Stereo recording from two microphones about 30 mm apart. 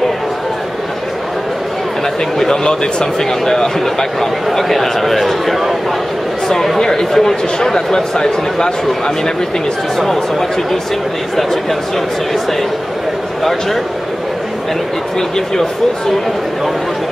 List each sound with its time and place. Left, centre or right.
2.3 s a man's voice: centre
6.8 s speech: centre
13.4 s speech: centre
15.1 s speech: left